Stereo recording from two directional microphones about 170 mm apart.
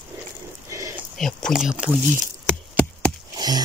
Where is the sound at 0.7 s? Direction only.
20° right (ahead or behind).